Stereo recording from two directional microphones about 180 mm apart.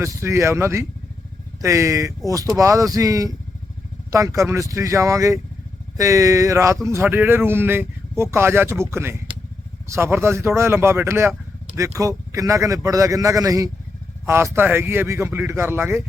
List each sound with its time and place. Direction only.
0.0 s a man's voice: 15° right (ahead or behind)